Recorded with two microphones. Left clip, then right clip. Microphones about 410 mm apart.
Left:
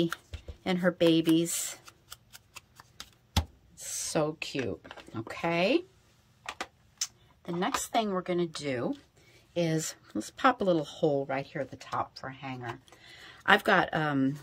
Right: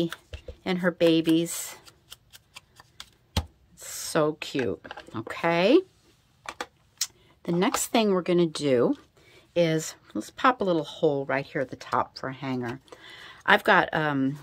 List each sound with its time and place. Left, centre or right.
0.7 s tick: centre
3.7 s speech: centre
7.0 s speech: right
9.5 s speech: centre